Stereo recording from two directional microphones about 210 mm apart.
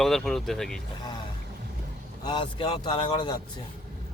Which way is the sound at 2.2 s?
25° left (ahead or behind).